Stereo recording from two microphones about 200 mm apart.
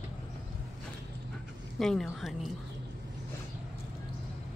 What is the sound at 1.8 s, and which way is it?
Speech, centre (ahead or behind).